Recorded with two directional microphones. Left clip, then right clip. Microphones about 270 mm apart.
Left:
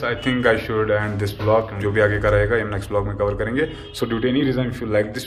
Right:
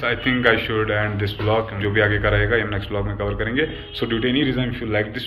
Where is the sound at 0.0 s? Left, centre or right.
Centre.